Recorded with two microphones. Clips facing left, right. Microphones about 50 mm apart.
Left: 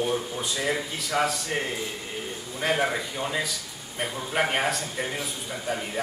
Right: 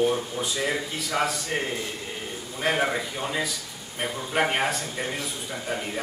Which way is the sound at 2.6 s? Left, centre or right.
Centre.